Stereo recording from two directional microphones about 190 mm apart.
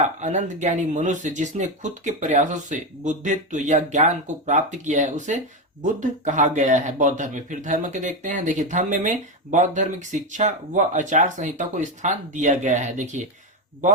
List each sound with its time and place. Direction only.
0.0 s speech: 40° right (ahead or behind)